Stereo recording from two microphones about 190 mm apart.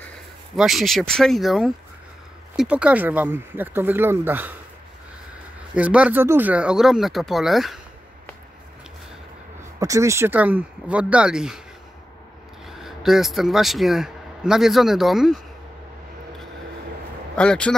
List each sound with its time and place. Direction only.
0.6 s speech: centre (ahead or behind)
5.8 s speech: 5° right (ahead or behind)
9.8 s speech: 15° right (ahead or behind)
12.6 s a man's voice: centre (ahead or behind)
17.4 s speech: 5° left (ahead or behind)